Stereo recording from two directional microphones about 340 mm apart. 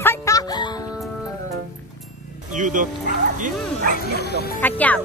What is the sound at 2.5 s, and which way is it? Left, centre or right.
Bow-wow, right.